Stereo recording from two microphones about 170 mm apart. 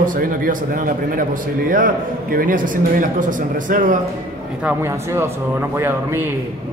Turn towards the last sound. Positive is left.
turn(degrees=-15)  # may be behind; listen again after turning